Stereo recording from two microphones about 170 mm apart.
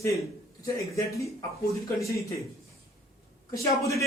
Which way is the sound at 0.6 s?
20° left (ahead or behind).